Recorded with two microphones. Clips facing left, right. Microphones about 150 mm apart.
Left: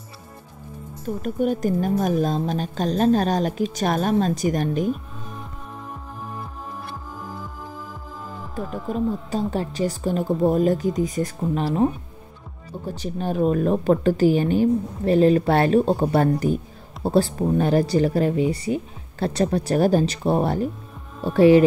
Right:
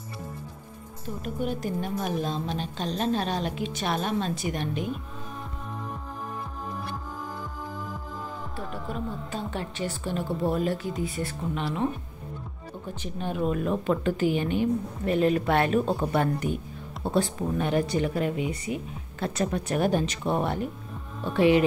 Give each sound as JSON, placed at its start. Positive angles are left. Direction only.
{"t": 1.0, "sound": "a woman's voice", "side_deg": 45}
{"t": 8.5, "sound": "a woman's voice", "side_deg": 40}